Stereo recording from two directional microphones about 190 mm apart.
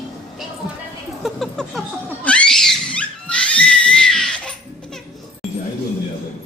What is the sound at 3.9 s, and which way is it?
Crying, 5° left (ahead or behind).